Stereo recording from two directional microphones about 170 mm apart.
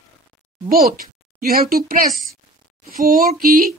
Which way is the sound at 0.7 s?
60° right (ahead or behind).